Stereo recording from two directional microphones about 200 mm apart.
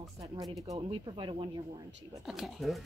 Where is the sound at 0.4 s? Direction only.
20° right (ahead or behind).